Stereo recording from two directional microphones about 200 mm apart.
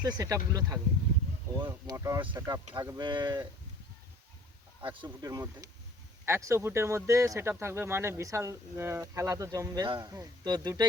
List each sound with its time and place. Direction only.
0.0 s speech: 20° right (ahead or behind)
4.8 s speech: 25° right (ahead or behind)